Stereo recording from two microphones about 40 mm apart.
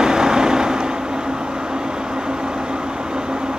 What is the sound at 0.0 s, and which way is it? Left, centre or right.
Vehicle, centre.